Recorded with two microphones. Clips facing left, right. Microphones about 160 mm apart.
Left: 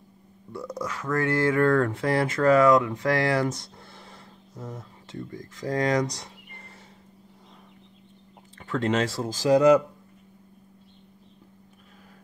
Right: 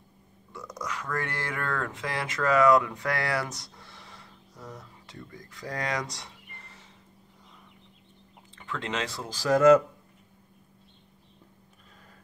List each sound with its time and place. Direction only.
0.5 s speech: 30° left (ahead or behind)
1.6 s speech: 40° left (ahead or behind)
4.2 s a sound: 25° left (ahead or behind)
5.7 s speech: 25° left (ahead or behind)
5.9 s speech: 40° left (ahead or behind)
8.5 s speech: 45° left (ahead or behind)
9.4 s speech: 15° left (ahead or behind)